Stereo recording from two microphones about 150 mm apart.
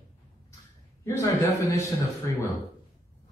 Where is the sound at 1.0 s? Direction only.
20° left (ahead or behind).